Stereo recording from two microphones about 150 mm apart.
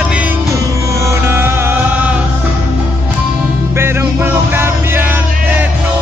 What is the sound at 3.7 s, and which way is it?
Music, 15° right (ahead or behind).